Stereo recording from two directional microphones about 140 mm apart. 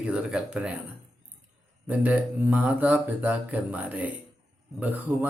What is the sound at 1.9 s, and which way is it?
Speech, 10° right (ahead or behind).